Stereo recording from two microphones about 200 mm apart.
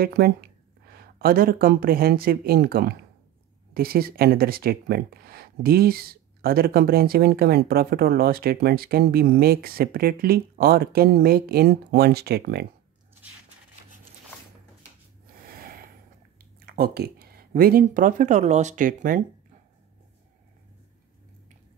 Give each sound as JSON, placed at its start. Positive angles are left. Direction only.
{"t": 0.0, "sound": "speech", "side_deg": -50}
{"t": 15.4, "sound": "snort", "side_deg": -45}
{"t": 16.6, "sound": "speech", "side_deg": -50}